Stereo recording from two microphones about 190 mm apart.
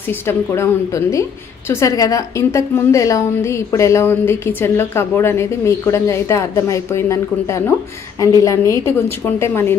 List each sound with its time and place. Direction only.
0.3 s a woman's voice: 15° left (ahead or behind)